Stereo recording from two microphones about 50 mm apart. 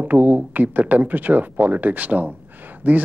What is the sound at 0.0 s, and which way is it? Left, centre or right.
Speech, right.